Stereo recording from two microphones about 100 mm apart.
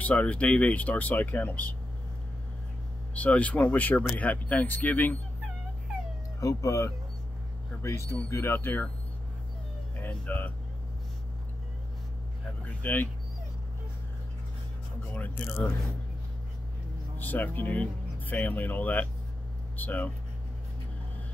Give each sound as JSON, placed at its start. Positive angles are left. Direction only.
{"t": 0.0, "sound": "speech", "side_deg": 15}
{"t": 3.2, "sound": "speech", "side_deg": 15}
{"t": 6.4, "sound": "speech", "side_deg": 30}
{"t": 9.9, "sound": "speech", "side_deg": 15}
{"t": 12.6, "sound": "a sound", "side_deg": 20}
{"t": 15.1, "sound": "speech", "side_deg": 15}
{"t": 17.2, "sound": "speech", "side_deg": 15}